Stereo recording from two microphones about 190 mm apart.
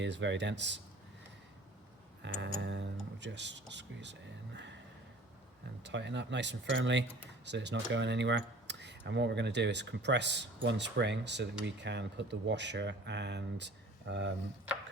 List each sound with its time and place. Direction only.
0.0 s speech: 70° right (ahead or behind)
2.2 s speech: 70° right (ahead or behind)
2.6 s music: 70° right (ahead or behind)
5.8 s speech: 65° right (ahead or behind)